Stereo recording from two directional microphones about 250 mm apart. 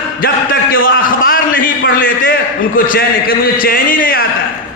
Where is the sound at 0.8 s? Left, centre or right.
Left.